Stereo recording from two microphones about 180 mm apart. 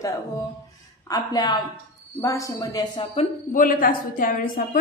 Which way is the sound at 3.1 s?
50° left (ahead or behind).